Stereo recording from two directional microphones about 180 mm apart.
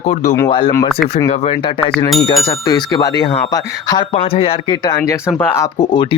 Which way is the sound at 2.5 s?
20° left (ahead or behind).